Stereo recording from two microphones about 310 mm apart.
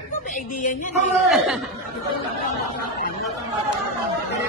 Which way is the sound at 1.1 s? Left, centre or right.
Centre.